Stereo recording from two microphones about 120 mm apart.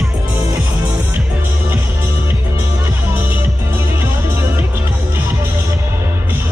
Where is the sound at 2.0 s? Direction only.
20° right (ahead or behind).